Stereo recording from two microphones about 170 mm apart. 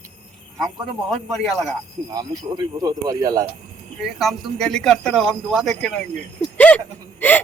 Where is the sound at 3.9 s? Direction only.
Centre (ahead or behind).